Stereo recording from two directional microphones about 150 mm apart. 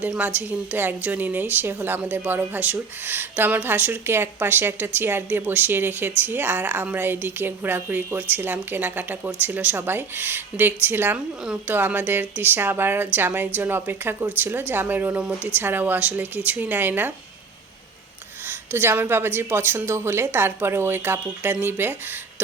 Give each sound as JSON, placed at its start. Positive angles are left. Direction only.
{"t": 0.1, "sound": "a woman's voice", "side_deg": -10}
{"t": 18.4, "sound": "a woman's voice", "side_deg": -15}